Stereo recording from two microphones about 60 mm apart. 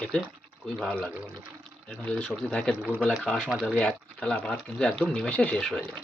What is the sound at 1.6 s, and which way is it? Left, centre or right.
Speech, centre.